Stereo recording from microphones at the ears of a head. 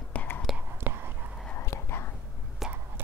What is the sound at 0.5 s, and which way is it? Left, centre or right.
Whispering, right.